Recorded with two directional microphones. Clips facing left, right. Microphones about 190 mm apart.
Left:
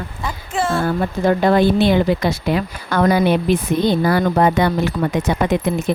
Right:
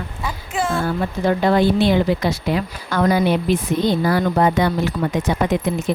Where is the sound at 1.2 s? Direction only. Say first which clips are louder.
Left 2 dB; 50° left (ahead or behind).